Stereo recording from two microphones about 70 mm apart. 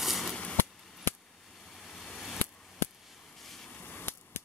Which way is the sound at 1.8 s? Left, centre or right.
Centre.